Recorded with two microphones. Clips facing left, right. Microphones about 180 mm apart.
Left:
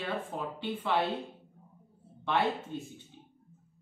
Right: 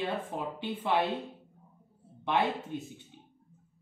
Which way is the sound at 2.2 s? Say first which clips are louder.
Right 1 dB; 20° right (ahead or behind).